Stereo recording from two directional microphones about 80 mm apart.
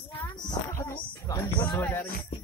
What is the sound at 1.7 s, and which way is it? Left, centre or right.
Music, left.